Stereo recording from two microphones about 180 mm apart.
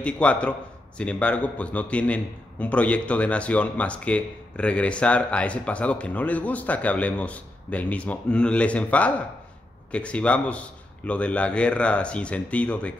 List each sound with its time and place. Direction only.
0.0 s a man's voice: 5° left (ahead or behind)